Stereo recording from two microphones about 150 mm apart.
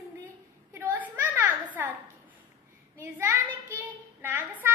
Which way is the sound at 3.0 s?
15° right (ahead or behind).